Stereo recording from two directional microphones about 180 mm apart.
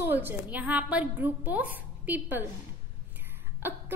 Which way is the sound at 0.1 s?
10° right (ahead or behind).